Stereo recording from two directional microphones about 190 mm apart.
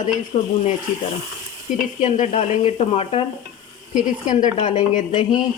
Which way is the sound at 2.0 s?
40° left (ahead or behind).